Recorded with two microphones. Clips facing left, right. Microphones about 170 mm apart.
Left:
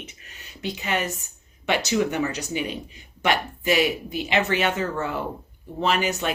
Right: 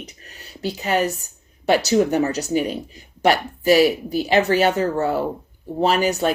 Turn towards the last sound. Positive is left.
turn(degrees=-35)  # may be behind; listen again after turning